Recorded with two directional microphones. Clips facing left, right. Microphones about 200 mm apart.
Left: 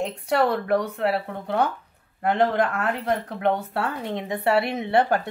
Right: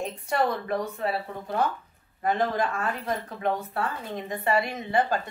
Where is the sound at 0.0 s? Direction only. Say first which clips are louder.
Left 4 dB; 70° left (ahead or behind).